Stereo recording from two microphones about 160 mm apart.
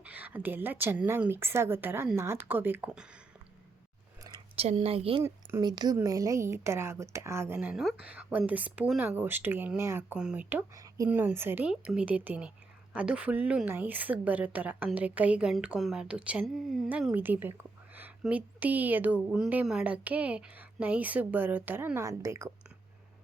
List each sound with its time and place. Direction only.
0.0 s a woman's voice: 10° right (ahead or behind)
4.5 s speech: 40° right (ahead or behind)
5.2 s speech: 15° right (ahead or behind)
5.6 s a woman's voice: 25° right (ahead or behind)
10.0 s a woman's voice: 5° right (ahead or behind)
10.8 s a woman's voice: 20° right (ahead or behind)